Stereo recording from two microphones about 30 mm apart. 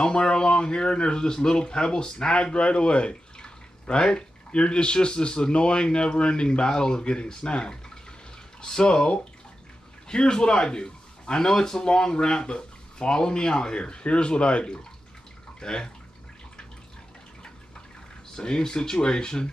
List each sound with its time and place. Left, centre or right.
0.0 s a man's voice: left
18.3 s speech: left